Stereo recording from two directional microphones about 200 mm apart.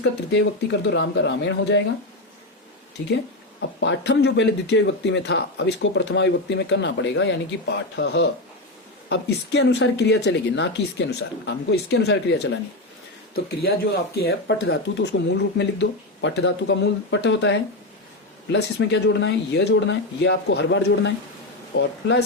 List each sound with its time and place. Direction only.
0.0 s speech: 60° left (ahead or behind)
3.0 s speech: 60° left (ahead or behind)
14.2 s speech: 55° left (ahead or behind)